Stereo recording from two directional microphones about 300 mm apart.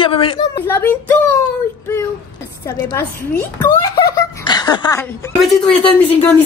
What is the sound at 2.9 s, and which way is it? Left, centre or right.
Speech, centre.